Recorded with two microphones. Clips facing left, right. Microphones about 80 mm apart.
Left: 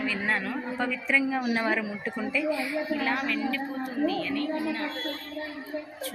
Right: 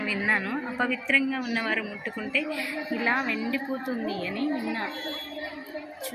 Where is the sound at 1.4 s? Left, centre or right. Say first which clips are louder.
Left 2 dB; left.